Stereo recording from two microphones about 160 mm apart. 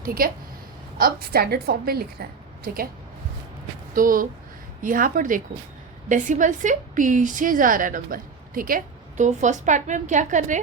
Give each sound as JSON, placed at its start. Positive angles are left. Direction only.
{"t": 0.0, "sound": "a woman's voice", "side_deg": -65}
{"t": 3.9, "sound": "a woman's voice", "side_deg": -60}